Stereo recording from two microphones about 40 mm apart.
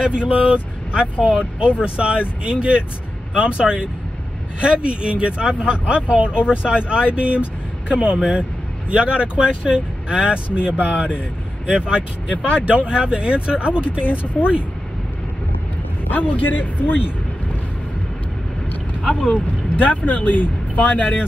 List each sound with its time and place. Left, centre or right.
0.0 s speech: right
14.0 s a man's voice: left
14.3 s speech: right
16.1 s a man's voice: left
19.1 s speech: left